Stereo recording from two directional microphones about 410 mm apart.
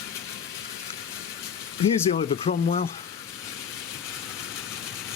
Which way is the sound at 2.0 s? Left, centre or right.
Centre.